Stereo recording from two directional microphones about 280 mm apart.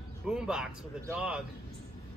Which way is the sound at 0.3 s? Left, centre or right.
Centre.